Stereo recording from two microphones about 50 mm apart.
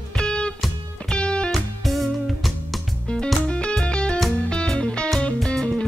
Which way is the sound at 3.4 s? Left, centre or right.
Left.